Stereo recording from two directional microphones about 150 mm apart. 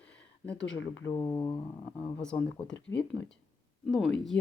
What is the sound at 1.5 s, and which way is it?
Speech, 40° left (ahead or behind).